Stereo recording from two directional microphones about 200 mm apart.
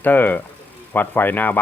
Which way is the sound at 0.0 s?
10° left (ahead or behind).